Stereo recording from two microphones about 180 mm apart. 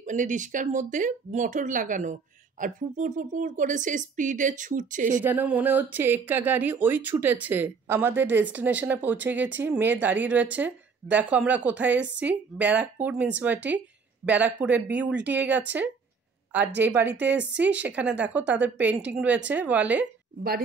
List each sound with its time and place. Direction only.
0.0 s speech: 45° right (ahead or behind)
5.2 s speech: 10° right (ahead or behind)